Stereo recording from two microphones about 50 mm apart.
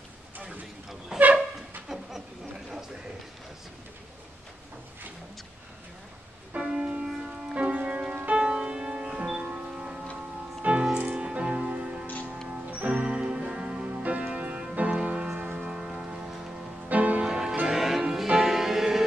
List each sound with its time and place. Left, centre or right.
0.8 s a sound: centre
6.5 s church bell: right
7.2 s music: centre
15.3 s a sound: right
16.9 s music: right
17.2 s music: centre